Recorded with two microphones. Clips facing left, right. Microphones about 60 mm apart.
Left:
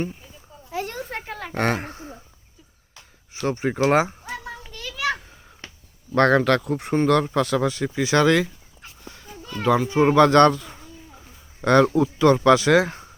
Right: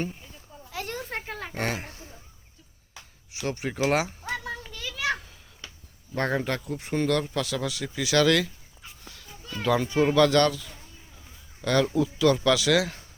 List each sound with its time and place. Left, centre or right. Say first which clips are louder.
0.7 s a sound: left 6 dB; left
1.5 s speech: left 8 dB; left
1.9 s a sound: left 8 dB; left
3.4 s speech: left 6 dB; left
4.3 s children playing: right 1 dB; centre
5.2 s a sound: left 3 dB; left
6.1 s speech: left 10 dB; left
6.9 s speech: left 6 dB; left
9.6 s speech: left 4 dB; centre
9.9 s speech: left 5 dB; left